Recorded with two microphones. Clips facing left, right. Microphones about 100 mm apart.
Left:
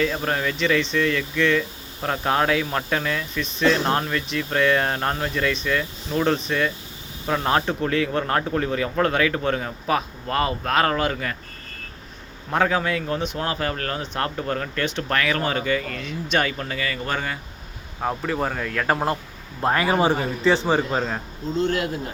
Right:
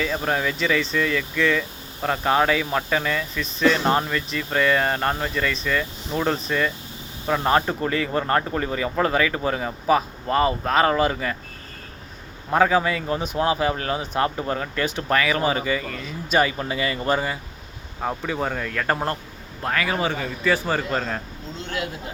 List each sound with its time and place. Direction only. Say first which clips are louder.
0.0 s speech: even; centre (ahead or behind)
12.5 s speech: right 3 dB; 5° right (ahead or behind)
16.6 s speech: right 3 dB; 20° right (ahead or behind)
17.1 s speech: right 4 dB; 10° right (ahead or behind)
19.6 s speech: left 4 dB; 30° left (ahead or behind); by 21.2 s 10° left (ahead or behind)
21.6 s speech: left 7 dB; 45° left (ahead or behind)